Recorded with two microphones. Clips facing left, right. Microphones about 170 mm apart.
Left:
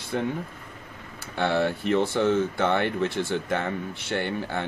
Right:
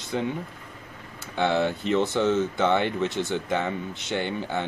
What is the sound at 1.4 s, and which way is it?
Speech, 20° right (ahead or behind).